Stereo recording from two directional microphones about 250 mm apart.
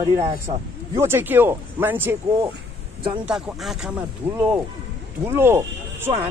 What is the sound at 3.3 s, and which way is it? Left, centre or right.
Speech, centre.